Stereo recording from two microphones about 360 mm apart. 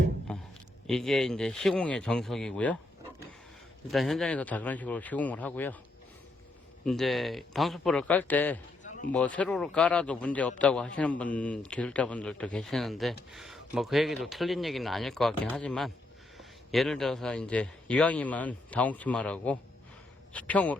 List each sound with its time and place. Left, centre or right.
0.3 s a sound: centre
0.9 s a man's voice: centre
3.9 s a man's voice: centre
6.8 s a man's voice: centre
8.8 s a sound: left
9.1 s a man's voice: centre